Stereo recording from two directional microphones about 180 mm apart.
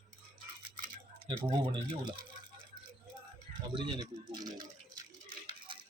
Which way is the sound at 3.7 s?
25° right (ahead or behind).